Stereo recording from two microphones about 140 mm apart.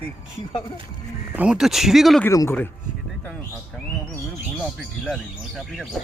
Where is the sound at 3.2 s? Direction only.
10° left (ahead or behind).